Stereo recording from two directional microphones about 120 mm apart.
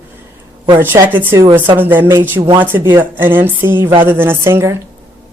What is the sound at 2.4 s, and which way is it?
Speech, 40° right (ahead or behind).